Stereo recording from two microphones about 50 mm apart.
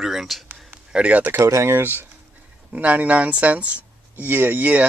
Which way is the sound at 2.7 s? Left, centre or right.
Right.